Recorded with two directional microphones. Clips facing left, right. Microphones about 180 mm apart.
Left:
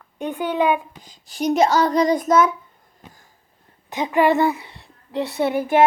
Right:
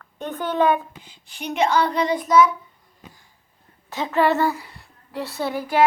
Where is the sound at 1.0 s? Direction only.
40° left (ahead or behind).